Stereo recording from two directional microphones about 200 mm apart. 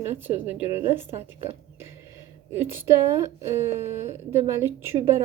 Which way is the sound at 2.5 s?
10° right (ahead or behind).